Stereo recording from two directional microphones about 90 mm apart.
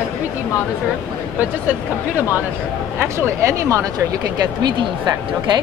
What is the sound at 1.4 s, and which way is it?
Speech, 20° right (ahead or behind).